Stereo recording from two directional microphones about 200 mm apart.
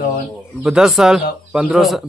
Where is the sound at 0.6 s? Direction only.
Centre (ahead or behind).